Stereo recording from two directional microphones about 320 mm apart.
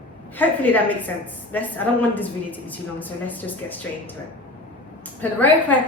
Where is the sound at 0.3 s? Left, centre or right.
Centre.